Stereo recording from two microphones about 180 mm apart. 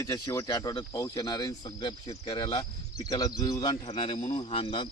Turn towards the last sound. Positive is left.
turn(degrees=30)  # may be behind; listen again after turning